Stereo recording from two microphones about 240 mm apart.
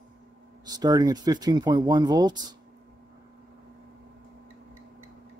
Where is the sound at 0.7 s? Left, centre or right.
Centre.